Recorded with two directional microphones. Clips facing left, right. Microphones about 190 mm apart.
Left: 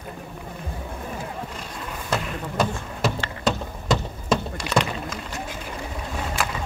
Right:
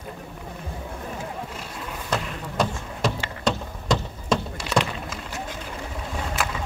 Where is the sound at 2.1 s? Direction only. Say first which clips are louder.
Left 2 dB; 5° left (ahead or behind).